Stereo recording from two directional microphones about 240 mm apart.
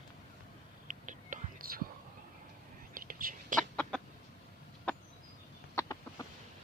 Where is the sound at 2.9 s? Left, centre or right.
Right.